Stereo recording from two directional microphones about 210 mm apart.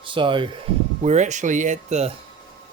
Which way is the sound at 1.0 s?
35° right (ahead or behind).